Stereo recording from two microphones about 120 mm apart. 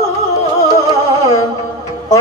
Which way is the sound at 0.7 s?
30° left (ahead or behind).